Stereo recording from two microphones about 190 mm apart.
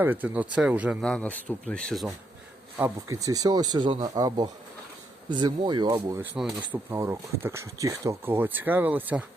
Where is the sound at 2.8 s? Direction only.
15° right (ahead or behind).